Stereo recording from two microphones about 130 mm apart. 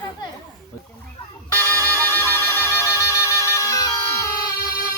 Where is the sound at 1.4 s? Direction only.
20° left (ahead or behind).